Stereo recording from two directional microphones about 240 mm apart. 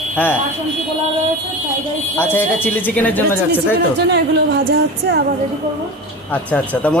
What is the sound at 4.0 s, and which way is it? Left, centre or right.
Speech, right.